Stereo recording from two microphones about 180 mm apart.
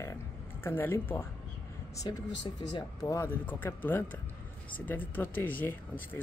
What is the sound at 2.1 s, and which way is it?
Speech, 25° left (ahead or behind).